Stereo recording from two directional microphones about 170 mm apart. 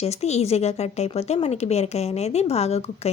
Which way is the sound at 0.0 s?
40° left (ahead or behind).